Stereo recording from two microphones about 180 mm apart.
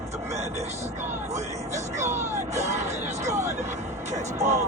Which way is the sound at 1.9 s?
40° right (ahead or behind).